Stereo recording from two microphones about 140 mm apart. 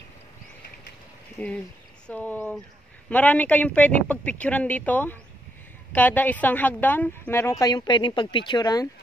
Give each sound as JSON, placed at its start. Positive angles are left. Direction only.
{"t": 1.4, "sound": "a woman's voice", "side_deg": 10}